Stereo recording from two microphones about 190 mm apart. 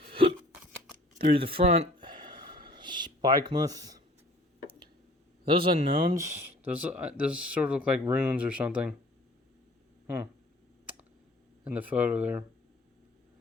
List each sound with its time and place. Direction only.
0.1 s hiccup: 30° right (ahead or behind)
1.2 s a sound: 30° right (ahead or behind)
5.5 s speech: 25° right (ahead or behind)
6.1 s speech: 15° right (ahead or behind)
11.6 s speech: 5° right (ahead or behind)